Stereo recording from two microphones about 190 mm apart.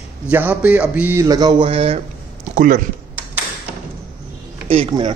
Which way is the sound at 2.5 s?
45° right (ahead or behind).